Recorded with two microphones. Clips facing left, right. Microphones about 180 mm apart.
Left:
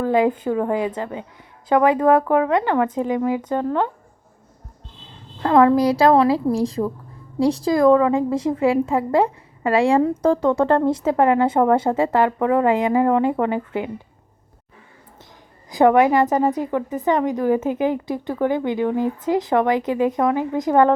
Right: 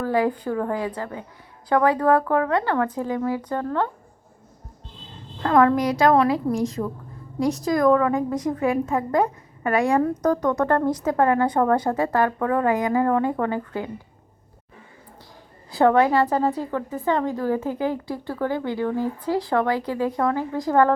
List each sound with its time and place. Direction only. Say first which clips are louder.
0.0 s a woman's voice: left 4 dB; 20° left (ahead or behind)
5.4 s a woman's voice: left 3 dB; 25° left (ahead or behind)
15.7 s a woman's voice: left 3 dB; 15° left (ahead or behind)